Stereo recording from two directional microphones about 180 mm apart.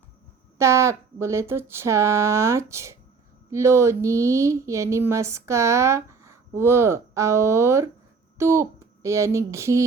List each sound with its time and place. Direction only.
0.6 s speech: 15° right (ahead or behind)